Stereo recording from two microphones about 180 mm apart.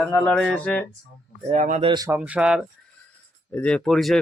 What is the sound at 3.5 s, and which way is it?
Speech, 5° left (ahead or behind).